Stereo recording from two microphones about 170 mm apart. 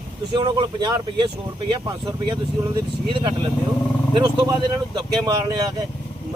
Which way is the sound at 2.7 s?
30° right (ahead or behind).